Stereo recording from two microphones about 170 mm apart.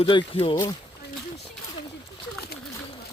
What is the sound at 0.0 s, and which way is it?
Speech, 30° left (ahead or behind).